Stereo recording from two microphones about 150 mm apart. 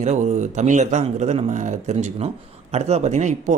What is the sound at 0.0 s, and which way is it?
A man's voice, 50° right (ahead or behind).